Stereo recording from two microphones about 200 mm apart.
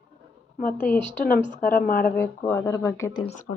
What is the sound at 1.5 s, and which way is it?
Speech, 40° left (ahead or behind).